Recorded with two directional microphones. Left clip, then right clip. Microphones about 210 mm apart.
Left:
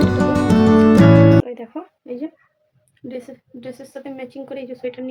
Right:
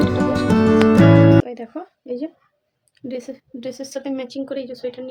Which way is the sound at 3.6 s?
35° right (ahead or behind).